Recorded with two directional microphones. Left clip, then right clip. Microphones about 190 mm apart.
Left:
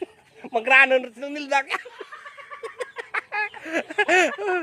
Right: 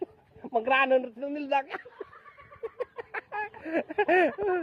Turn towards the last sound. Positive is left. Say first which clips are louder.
# left 4 dB
turn(degrees=15)  # may be behind; listen again after turning